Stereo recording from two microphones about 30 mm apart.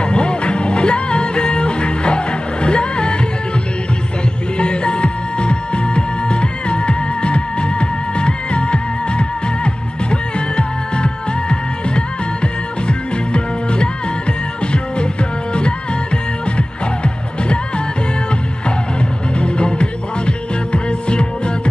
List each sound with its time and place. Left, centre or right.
0.0 s music: left
4.6 s music: left
10.5 s music: left
16.5 s music: left
19.3 s music: left